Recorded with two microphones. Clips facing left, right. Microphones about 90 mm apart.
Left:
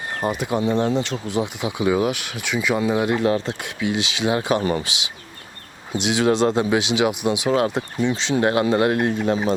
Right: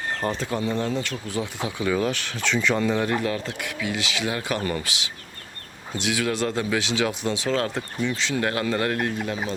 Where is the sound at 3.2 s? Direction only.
25° left (ahead or behind).